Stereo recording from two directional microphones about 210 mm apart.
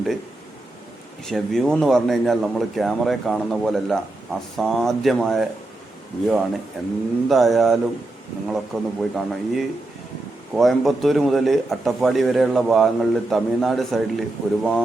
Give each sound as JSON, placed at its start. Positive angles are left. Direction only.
{"t": 1.2, "sound": "speech", "side_deg": 0}
{"t": 6.8, "sound": "speech", "side_deg": 0}